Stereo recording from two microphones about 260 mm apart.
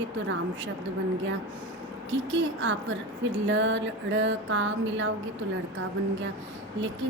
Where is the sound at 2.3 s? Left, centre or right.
Right.